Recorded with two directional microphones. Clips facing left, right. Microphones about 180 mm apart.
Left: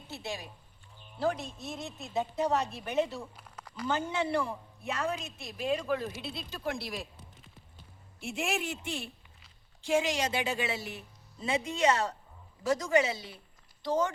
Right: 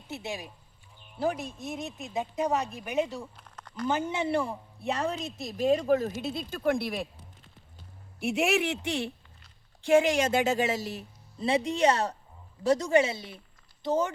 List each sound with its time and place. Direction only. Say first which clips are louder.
0.1 s a woman's voice: right 3 dB; 15° right (ahead or behind)
3.3 s a sound: right 4 dB; 5° left (ahead or behind)
3.8 s a woman's voice: right 3 dB; 20° right (ahead or behind); by 7.1 s 60° right (ahead or behind)
8.2 s speech: right 7 dB; 70° right (ahead or behind)
9.8 s a woman's voice: right 6 dB; 55° right (ahead or behind); by 14.1 s 20° right (ahead or behind)